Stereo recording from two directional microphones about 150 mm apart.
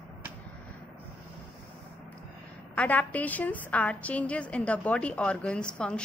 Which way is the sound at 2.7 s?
10° left (ahead or behind).